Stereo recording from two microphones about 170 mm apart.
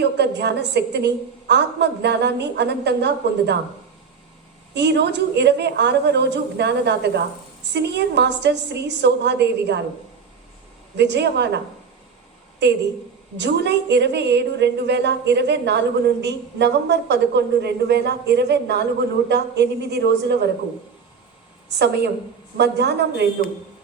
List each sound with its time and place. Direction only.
0.0 s a woman's voice: 80° right
4.7 s a woman's voice: 90° right
10.9 s a woman's voice: 90° right
21.7 s a woman's voice: 80° right